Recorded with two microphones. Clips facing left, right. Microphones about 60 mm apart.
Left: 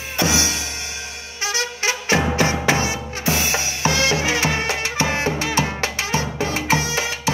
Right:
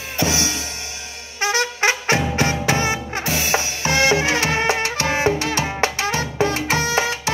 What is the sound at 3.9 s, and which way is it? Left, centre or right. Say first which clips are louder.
Music: right 3 dB; right.